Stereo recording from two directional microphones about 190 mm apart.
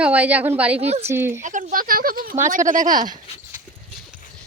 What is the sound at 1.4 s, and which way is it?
Speech, 40° right (ahead or behind).